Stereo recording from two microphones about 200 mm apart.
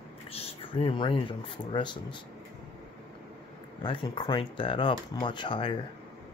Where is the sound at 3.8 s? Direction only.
20° left (ahead or behind).